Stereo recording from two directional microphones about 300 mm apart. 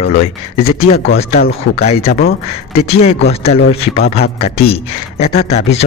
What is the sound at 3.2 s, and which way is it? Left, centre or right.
Speech, left.